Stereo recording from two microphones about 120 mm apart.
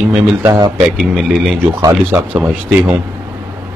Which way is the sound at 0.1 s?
20° right (ahead or behind).